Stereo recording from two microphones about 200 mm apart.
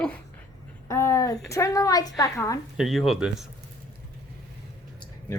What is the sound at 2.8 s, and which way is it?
Speech, centre (ahead or behind).